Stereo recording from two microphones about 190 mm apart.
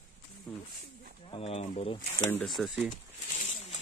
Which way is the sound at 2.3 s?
5° left (ahead or behind).